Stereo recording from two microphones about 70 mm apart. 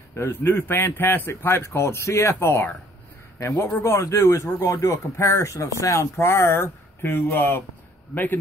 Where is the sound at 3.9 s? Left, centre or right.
Left.